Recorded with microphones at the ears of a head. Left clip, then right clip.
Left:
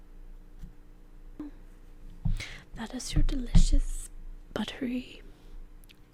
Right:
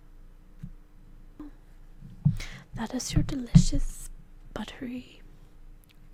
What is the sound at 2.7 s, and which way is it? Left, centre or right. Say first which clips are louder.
Speech: right 6 dB; right.